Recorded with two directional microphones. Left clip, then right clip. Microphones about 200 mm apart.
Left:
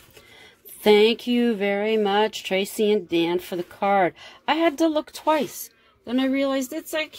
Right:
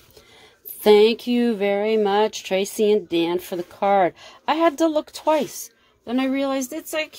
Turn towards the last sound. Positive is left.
turn(degrees=0)  # may be behind; listen again after turning